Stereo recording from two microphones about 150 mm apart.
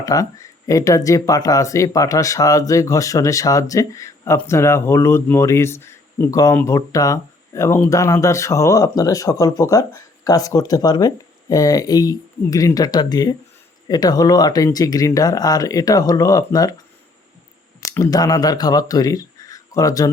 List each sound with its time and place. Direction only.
0.0 s speech: 25° left (ahead or behind)
17.7 s speech: 20° left (ahead or behind)